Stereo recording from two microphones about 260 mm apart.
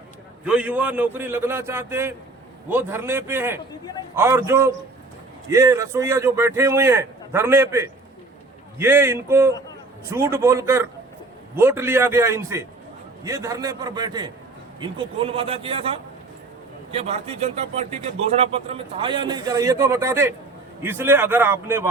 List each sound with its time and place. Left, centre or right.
0.4 s a man's voice: centre